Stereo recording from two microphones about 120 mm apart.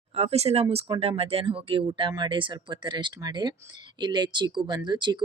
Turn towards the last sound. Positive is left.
turn(degrees=-40)  # may be behind; listen again after turning